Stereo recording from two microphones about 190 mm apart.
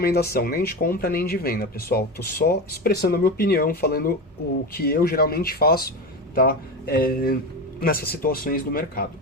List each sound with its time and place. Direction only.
0.0 s speech: 55° left (ahead or behind)